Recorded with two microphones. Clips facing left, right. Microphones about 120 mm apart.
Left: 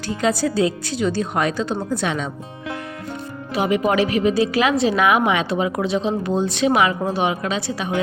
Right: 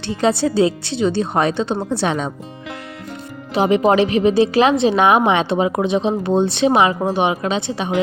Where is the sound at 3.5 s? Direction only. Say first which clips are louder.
Right 4 dB; 30° right (ahead or behind).